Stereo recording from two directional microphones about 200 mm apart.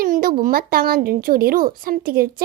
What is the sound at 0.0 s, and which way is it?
A child's voice, 45° right (ahead or behind).